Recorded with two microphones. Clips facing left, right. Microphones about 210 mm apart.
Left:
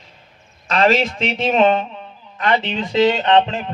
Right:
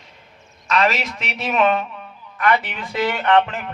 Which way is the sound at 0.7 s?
30° left (ahead or behind).